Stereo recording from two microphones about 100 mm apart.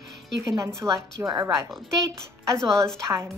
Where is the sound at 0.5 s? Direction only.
30° right (ahead or behind).